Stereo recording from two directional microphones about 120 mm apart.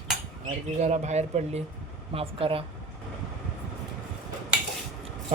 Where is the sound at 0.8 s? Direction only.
75° right (ahead or behind).